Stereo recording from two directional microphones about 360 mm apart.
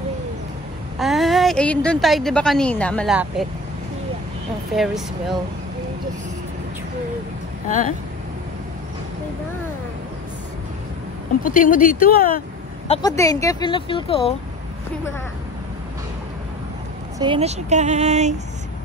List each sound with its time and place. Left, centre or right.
0.9 s a woman's voice: centre
4.7 s a woman's voice: centre
11.4 s speech: left
17.2 s speech: centre